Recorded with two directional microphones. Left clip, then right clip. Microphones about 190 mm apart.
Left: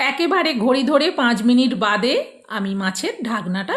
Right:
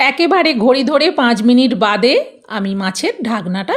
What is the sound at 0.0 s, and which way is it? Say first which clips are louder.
A woman's voice: right 6 dB; 40° right (ahead or behind).